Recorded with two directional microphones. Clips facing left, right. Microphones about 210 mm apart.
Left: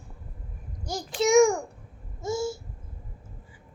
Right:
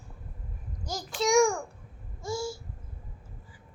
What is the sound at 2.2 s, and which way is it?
Babbling, 20° left (ahead or behind).